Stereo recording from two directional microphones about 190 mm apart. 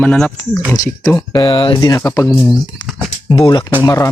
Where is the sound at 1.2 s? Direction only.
20° left (ahead or behind).